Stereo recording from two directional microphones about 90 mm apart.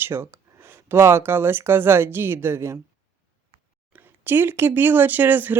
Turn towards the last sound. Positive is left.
turn(degrees=-20)  # may be behind; listen again after turning